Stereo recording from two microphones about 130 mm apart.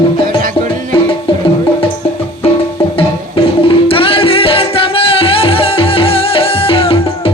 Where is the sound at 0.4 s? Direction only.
90° right.